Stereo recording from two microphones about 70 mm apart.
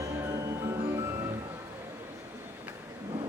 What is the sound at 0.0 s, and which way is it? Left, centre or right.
Music, right.